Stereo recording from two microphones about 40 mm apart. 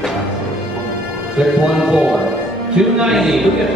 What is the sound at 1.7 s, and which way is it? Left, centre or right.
Speech, centre.